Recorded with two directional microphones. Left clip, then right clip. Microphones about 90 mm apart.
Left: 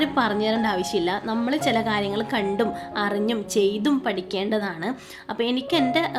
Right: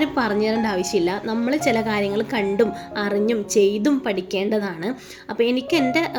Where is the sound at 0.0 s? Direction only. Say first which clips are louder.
Right 1 dB; 10° right (ahead or behind).